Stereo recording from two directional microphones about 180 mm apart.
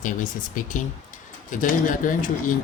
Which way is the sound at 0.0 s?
45° left (ahead or behind).